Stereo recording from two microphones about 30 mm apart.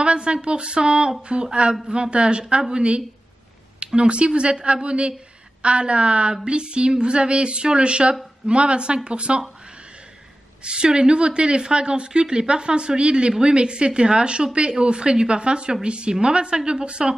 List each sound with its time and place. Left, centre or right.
0.0 s a woman's voice: right
10.6 s a woman's voice: right